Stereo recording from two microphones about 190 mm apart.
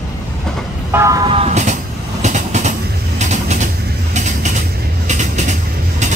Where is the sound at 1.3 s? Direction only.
35° right (ahead or behind).